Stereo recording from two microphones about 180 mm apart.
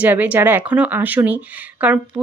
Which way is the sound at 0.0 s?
10° right (ahead or behind).